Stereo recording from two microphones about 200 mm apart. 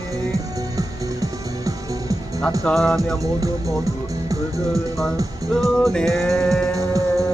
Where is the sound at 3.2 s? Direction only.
15° right (ahead or behind).